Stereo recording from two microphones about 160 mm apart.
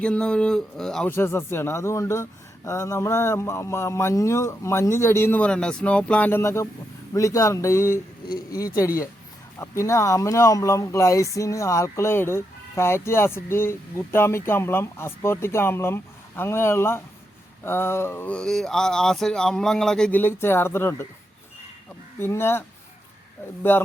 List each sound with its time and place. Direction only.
0.0 s speech: 5° left (ahead or behind)
22.2 s speech: 15° left (ahead or behind)
23.7 s speech: 15° left (ahead or behind)